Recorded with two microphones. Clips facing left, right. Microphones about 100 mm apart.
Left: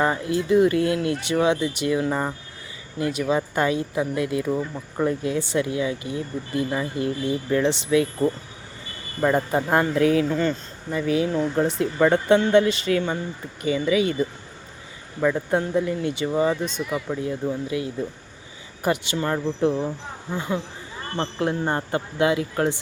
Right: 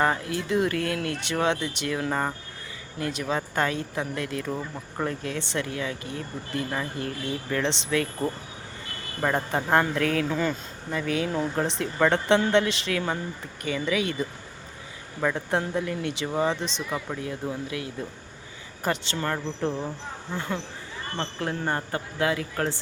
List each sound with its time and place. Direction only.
0.3 s speech: centre (ahead or behind)
9.2 s speech: centre (ahead or behind)
10.2 s speech: 5° right (ahead or behind)
21.2 s speech: 20° left (ahead or behind)